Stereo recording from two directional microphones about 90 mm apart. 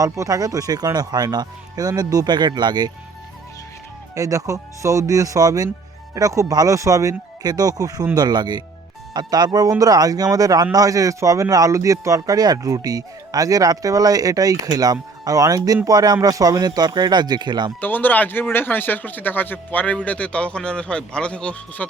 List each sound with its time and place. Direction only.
0.0 s speech: 40° right (ahead or behind)
4.1 s speech: 40° right (ahead or behind)
17.7 s speech: 20° left (ahead or behind)